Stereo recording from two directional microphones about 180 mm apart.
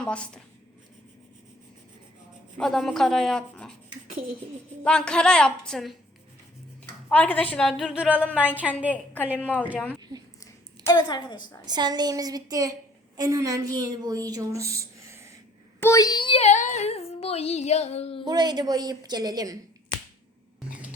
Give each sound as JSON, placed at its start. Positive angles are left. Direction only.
{"t": 0.0, "sound": "speech", "side_deg": 5}
{"t": 2.6, "sound": "speech", "side_deg": 0}
{"t": 4.8, "sound": "speech", "side_deg": 5}
{"t": 7.1, "sound": "a woman's voice", "side_deg": 10}
{"t": 9.4, "sound": "a woman's voice", "side_deg": 10}
{"t": 10.0, "sound": "a sound", "side_deg": -20}
{"t": 10.4, "sound": "a sound", "side_deg": 20}
{"t": 11.6, "sound": "a woman's voice", "side_deg": -25}
{"t": 15.8, "sound": "child singing", "side_deg": 20}
{"t": 18.3, "sound": "a woman's voice", "side_deg": -25}